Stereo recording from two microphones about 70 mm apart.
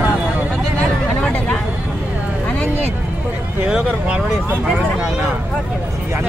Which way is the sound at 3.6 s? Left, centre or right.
Centre.